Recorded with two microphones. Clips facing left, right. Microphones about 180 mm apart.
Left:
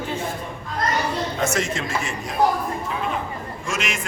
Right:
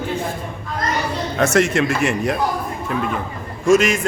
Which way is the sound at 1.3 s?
70° right (ahead or behind).